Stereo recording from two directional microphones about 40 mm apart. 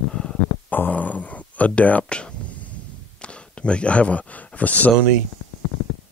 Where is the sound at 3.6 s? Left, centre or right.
Left.